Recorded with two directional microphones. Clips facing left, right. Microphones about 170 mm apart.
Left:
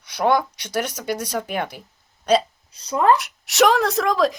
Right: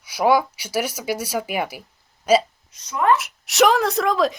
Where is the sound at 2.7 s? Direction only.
30° left (ahead or behind).